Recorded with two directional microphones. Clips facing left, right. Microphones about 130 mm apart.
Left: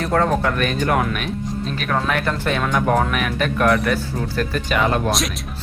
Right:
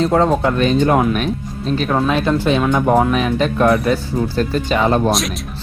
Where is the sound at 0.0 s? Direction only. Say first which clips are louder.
Right 4 dB; 20° right (ahead or behind).